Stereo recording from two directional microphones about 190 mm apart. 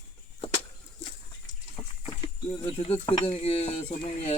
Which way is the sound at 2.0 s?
30° left (ahead or behind).